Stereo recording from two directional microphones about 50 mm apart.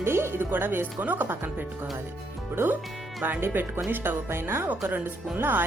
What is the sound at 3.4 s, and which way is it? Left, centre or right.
Speech, right.